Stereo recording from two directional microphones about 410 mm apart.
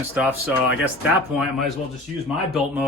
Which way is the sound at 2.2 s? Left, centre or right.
Centre.